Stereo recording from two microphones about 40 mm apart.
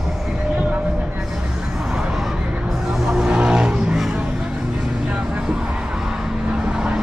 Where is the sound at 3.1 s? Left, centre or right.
Right.